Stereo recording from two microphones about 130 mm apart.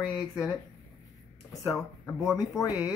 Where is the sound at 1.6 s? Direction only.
Centre (ahead or behind).